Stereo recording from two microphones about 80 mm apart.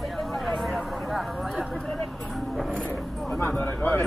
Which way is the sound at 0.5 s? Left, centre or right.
Centre.